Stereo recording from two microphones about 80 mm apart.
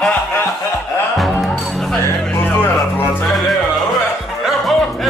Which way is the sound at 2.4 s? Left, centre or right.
Left.